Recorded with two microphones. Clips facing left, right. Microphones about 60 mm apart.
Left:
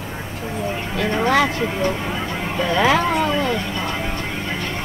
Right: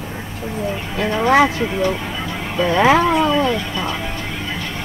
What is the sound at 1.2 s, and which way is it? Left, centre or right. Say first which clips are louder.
Speech: right 5 dB; centre.